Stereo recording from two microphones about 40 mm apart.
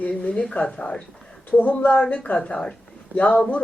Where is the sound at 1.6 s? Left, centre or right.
Left.